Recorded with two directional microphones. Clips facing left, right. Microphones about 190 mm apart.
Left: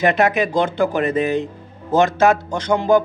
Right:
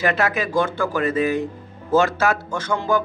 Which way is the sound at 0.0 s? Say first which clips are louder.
Left 5 dB; 20° left (ahead or behind).